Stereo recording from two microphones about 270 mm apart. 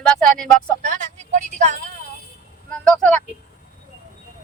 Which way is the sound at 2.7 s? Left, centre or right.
Centre.